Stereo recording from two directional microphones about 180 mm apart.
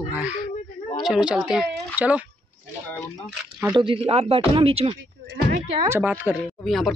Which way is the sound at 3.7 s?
30° right (ahead or behind).